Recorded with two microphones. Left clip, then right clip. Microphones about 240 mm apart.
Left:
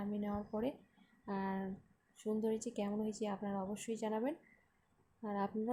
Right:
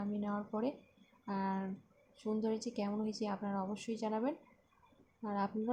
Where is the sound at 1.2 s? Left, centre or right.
Centre.